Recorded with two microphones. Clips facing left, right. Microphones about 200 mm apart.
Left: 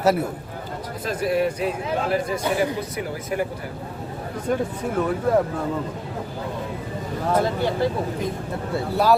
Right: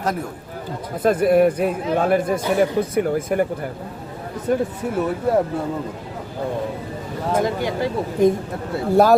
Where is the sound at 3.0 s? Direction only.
50° right (ahead or behind).